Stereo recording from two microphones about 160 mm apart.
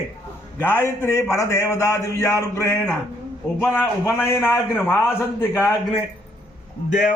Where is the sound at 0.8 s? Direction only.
15° left (ahead or behind).